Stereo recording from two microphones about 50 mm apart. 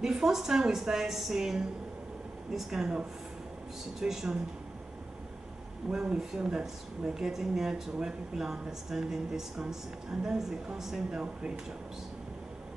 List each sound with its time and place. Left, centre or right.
0.0 s speech: centre
5.9 s speech: centre